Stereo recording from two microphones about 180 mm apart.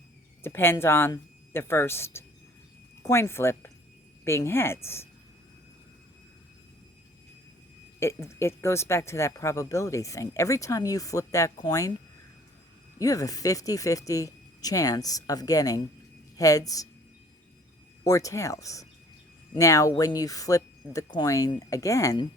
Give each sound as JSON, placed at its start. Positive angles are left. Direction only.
{"t": 0.4, "sound": "speech", "side_deg": 10}
{"t": 7.9, "sound": "speech", "side_deg": 15}
{"t": 13.0, "sound": "speech", "side_deg": 20}
{"t": 18.0, "sound": "speech", "side_deg": 20}